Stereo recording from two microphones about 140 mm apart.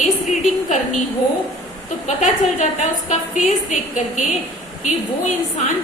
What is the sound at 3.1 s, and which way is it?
A woman's voice, 65° left (ahead or behind).